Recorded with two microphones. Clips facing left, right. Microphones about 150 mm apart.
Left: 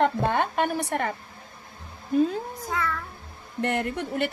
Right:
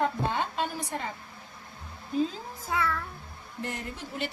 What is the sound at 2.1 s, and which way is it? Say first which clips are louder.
Speech: left 6 dB; 60° left (ahead or behind).